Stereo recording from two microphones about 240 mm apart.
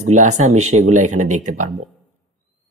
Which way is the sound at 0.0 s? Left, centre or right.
Right.